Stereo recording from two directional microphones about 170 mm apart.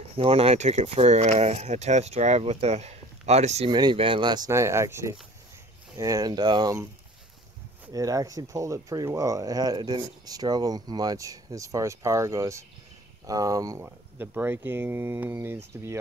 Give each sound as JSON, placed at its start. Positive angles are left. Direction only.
{"t": 0.1, "sound": "speech", "side_deg": -35}
{"t": 3.7, "sound": "speech", "side_deg": -30}
{"t": 7.9, "sound": "speech", "side_deg": -20}